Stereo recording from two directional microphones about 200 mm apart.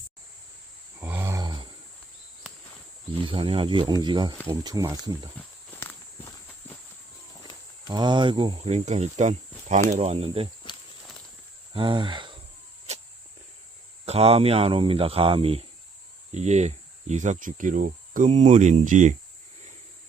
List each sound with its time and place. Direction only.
1.0 s roar: 10° right (ahead or behind)
3.2 s speech: 25° right (ahead or behind)
5.7 s walk: 10° left (ahead or behind)
7.9 s speech: 20° right (ahead or behind)
11.7 s a sound: 25° right (ahead or behind)
14.0 s speech: 30° right (ahead or behind)